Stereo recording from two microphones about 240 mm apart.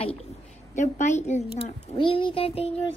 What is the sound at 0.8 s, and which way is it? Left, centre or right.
A child's voice, left.